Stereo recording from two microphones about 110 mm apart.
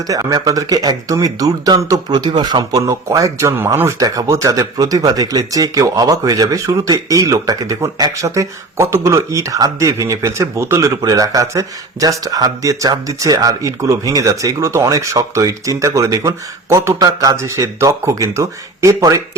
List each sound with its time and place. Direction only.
0.1 s a man's voice: 35° right (ahead or behind)